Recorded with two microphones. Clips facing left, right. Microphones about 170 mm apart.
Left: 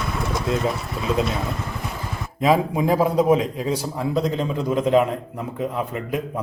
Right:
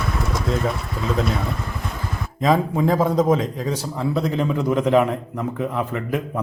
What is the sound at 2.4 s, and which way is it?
A man's voice, 10° left (ahead or behind).